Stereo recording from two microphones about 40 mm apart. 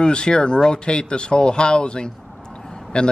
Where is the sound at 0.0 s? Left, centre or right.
Left.